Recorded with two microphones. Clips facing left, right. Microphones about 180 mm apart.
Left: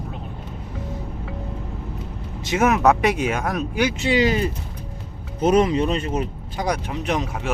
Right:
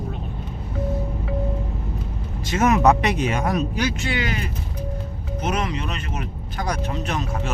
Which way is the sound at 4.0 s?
25° left (ahead or behind).